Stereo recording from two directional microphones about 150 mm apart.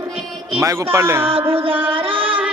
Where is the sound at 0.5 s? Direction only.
20° right (ahead or behind).